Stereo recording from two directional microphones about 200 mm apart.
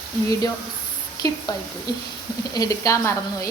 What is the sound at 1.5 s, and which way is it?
A woman's voice, 20° left (ahead or behind).